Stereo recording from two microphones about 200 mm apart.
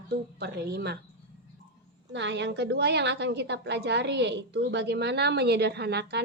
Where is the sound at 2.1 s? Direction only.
60° right (ahead or behind).